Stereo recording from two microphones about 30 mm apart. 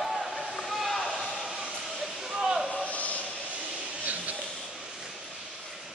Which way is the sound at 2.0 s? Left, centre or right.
Centre.